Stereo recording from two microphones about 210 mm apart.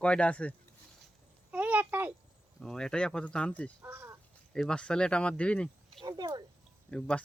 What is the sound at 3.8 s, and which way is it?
Speech, 15° right (ahead or behind).